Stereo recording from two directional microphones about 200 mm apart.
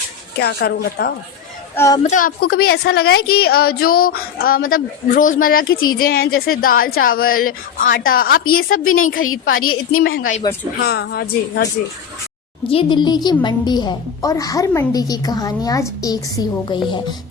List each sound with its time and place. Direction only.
0.3 s a woman's voice: 55° left (ahead or behind)
1.7 s a woman's voice: 15° left (ahead or behind)
2.0 s a woman's voice: 40° left (ahead or behind)
12.6 s a woman's voice: 25° left (ahead or behind)